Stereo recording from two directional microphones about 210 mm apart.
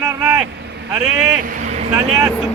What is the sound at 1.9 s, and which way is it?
Speech, 10° right (ahead or behind).